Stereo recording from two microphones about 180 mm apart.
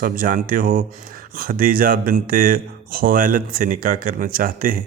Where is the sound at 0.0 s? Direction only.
50° right (ahead or behind).